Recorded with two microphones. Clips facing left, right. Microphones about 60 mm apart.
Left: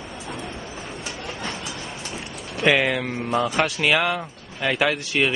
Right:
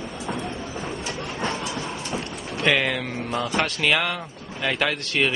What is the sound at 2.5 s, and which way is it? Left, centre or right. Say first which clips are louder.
Speech: left 2 dB; centre.